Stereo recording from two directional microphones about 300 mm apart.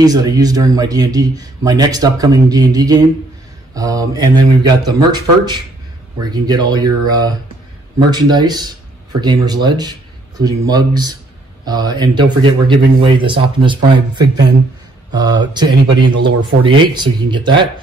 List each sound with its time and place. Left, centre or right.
0.0 s speech: centre